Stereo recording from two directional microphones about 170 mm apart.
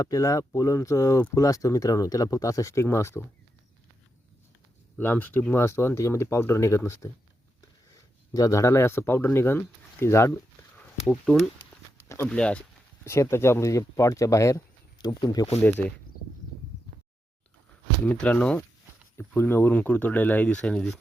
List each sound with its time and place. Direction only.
0.0 s speech: 20° left (ahead or behind)
4.9 s speech: 10° left (ahead or behind)
11.1 s speech: centre (ahead or behind)
12.0 s a sound: 15° left (ahead or behind)
12.3 s speech: 5° left (ahead or behind); by 15.4 s 20° left (ahead or behind)
15.6 s speech: 10° left (ahead or behind)
18.0 s speech: 10° left (ahead or behind)